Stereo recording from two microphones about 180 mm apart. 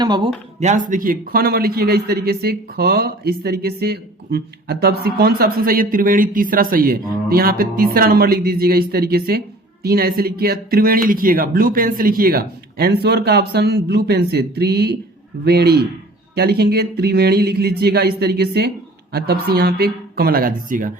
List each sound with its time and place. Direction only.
0.0 s speech: 25° right (ahead or behind)
0.6 s speech: 45° right (ahead or behind)